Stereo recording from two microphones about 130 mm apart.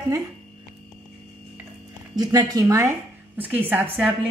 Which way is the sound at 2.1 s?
30° right (ahead or behind).